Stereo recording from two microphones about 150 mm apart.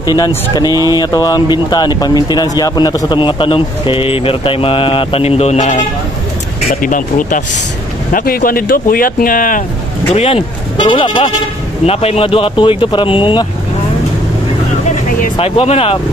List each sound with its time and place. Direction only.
0.7 s speech: 20° right (ahead or behind)
0.9 s speech: 25° left (ahead or behind); by 5.8 s 50° left (ahead or behind)
6.7 s speech: 65° left (ahead or behind)
8.1 s speech: 70° left (ahead or behind)
10.1 s speech: 40° left (ahead or behind)
15.3 s speech: 40° left (ahead or behind)